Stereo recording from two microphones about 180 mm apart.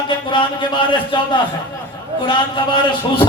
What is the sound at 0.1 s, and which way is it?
A man's voice, 25° left (ahead or behind).